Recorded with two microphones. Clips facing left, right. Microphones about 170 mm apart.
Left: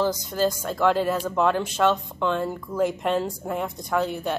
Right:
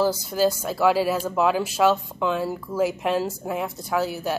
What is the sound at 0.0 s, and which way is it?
Speech, 5° right (ahead or behind).